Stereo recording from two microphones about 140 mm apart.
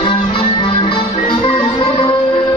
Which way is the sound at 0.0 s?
40° left (ahead or behind).